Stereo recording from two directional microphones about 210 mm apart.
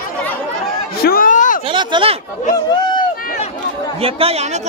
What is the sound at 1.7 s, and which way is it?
Speech, 25° right (ahead or behind).